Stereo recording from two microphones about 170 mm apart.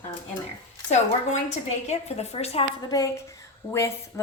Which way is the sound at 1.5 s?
40° left (ahead or behind).